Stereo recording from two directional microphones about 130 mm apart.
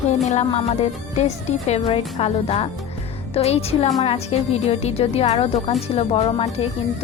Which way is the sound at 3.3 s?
50° left (ahead or behind).